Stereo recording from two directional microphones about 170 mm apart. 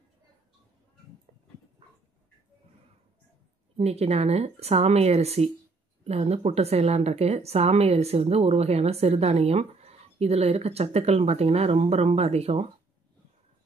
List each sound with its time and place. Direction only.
3.7 s a woman's voice: 40° right (ahead or behind)